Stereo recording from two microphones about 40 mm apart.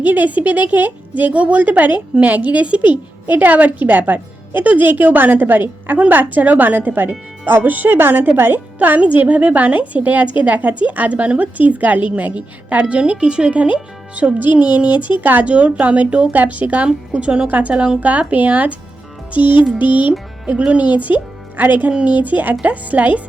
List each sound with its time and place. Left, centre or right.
0.0 s a woman's voice: right
9.2 s a woman's voice: right
15.4 s a woman's voice: right
17.2 s speech: right
17.5 s a woman's voice: right
19.3 s music: right
19.8 s a woman's voice: right
21.9 s a woman's voice: right